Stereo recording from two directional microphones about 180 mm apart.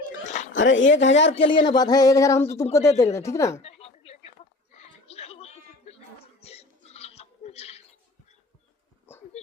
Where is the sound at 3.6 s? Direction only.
35° left (ahead or behind).